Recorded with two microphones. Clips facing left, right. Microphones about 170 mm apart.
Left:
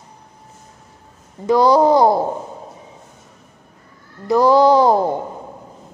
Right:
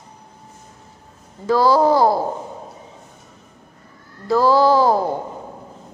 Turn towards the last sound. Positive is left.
turn(degrees=20)  # may be behind; listen again after turning